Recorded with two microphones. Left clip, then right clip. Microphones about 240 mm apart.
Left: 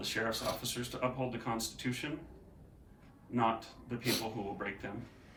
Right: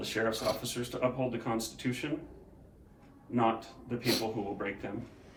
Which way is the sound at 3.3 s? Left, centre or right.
Centre.